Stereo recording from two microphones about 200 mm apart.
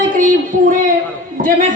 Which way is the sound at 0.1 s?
40° right (ahead or behind).